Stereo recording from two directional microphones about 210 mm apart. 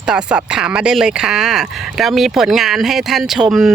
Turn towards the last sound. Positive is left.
turn(degrees=0)  # may be behind; listen again after turning